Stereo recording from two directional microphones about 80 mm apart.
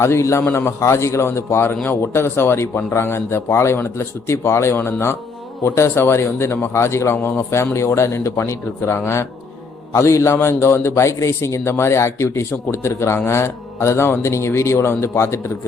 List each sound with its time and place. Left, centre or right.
0.0 s a man's voice: left